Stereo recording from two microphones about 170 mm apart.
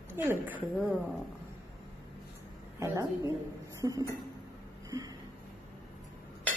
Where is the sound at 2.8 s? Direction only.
15° right (ahead or behind).